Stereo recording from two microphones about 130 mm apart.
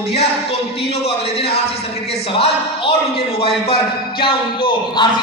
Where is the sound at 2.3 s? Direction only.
45° left (ahead or behind).